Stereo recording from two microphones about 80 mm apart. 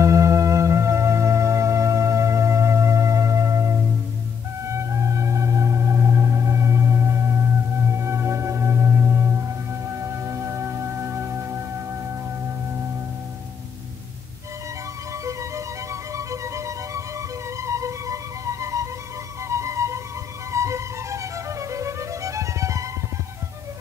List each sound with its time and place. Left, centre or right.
0.0 s music: right
15.2 s music: right